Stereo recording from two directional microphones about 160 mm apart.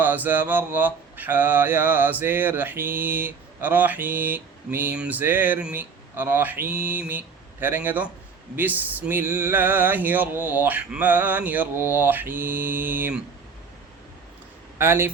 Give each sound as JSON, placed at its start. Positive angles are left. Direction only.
{"t": 0.0, "sound": "mantra", "side_deg": -10}
{"t": 14.8, "sound": "mantra", "side_deg": -15}